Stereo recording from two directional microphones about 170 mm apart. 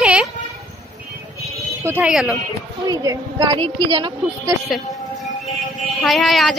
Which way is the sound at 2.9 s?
25° right (ahead or behind).